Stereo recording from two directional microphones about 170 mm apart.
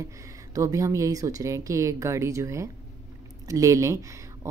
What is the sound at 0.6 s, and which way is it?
Speech, 20° right (ahead or behind).